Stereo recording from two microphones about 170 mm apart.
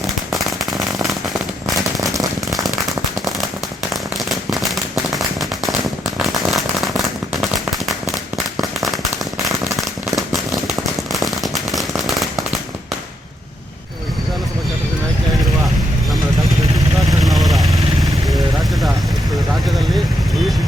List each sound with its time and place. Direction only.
0.3 s firecracker: centre (ahead or behind)
2.0 s firecracker: 20° right (ahead or behind)
4.3 s firecracker: centre (ahead or behind)
8.1 s firecracker: centre (ahead or behind)
17.1 s vehicle: centre (ahead or behind)